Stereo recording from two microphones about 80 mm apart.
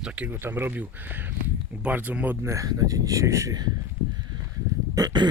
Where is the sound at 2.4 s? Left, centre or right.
Right.